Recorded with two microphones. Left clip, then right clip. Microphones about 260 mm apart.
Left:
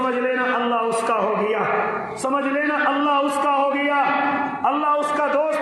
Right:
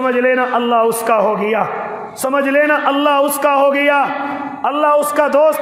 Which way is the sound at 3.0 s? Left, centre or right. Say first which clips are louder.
Right 6 dB; right.